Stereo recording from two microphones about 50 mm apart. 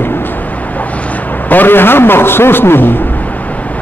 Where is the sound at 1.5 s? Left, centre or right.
Left.